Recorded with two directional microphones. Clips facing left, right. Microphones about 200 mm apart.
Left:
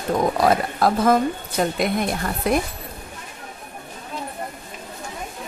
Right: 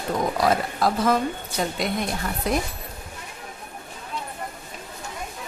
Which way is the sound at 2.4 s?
55° left (ahead or behind).